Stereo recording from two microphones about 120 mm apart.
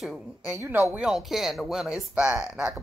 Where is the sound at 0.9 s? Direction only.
5° right (ahead or behind).